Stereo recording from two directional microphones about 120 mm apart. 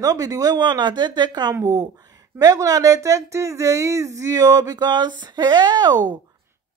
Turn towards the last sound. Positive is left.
turn(degrees=-35)  # may be behind; listen again after turning